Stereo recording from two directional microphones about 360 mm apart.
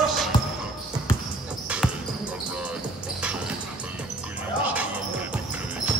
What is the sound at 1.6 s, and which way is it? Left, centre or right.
Basketball bounce, centre.